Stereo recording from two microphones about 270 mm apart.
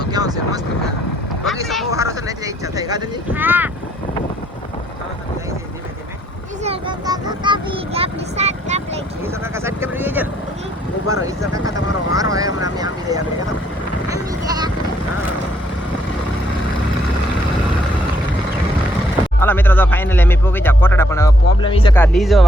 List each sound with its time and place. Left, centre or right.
0.0 s speech: centre
1.6 s speech: centre
1.9 s speech: centre
6.6 s speech: centre
9.2 s speech: centre
14.1 s a sound: centre
19.4 s speech: centre
21.9 s speech: centre